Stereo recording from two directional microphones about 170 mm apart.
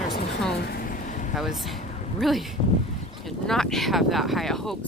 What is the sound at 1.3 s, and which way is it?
Speech, centre (ahead or behind).